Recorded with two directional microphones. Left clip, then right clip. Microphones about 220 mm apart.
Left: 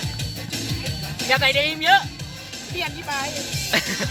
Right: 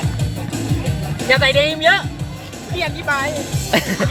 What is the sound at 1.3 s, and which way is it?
Speech, 35° left (ahead or behind).